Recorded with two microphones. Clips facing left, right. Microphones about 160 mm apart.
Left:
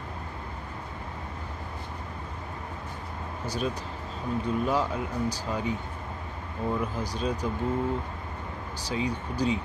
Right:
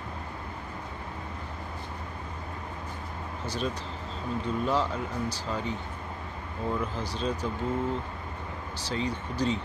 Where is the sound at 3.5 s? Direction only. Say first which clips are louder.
Left 1 dB; 10° left (ahead or behind).